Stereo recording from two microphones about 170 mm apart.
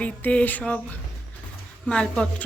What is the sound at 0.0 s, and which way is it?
A woman's voice, 10° left (ahead or behind).